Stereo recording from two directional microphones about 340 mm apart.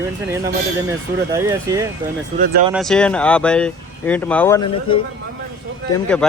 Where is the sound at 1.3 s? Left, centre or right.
Centre.